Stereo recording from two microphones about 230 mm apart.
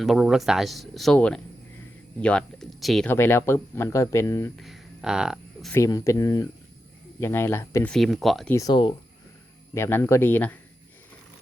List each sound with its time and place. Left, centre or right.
0.0 s speech: centre
4.5 s a sound: centre
5.7 s speech: centre
8.5 s speech: centre